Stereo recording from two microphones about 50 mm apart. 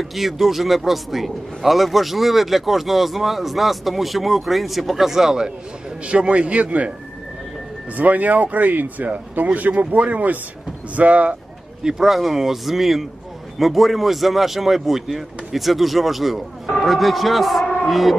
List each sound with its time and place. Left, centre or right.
0.0 s a man's voice: centre
6.0 s a man's voice: right
7.9 s a man's voice: right
11.8 s speech: centre
12.1 s a man's voice: centre